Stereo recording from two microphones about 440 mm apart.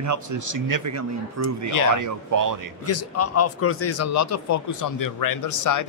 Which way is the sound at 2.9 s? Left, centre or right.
Left.